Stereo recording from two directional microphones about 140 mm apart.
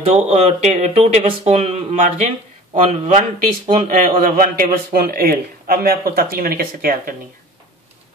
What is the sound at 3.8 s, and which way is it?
A man's voice, 80° right.